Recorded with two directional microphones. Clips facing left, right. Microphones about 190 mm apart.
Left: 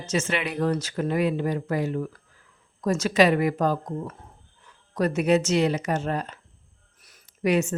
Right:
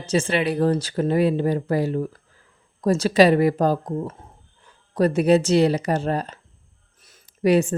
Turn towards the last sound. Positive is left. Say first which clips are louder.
# right 5 dB
turn(degrees=-35)  # may be behind; listen again after turning